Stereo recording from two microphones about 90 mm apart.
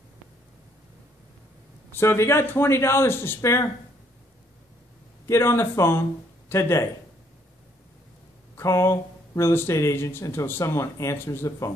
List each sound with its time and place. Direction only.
1.9 s a man's voice: 25° left (ahead or behind)
5.2 s a man's voice: 30° left (ahead or behind)
8.5 s speech: 30° left (ahead or behind)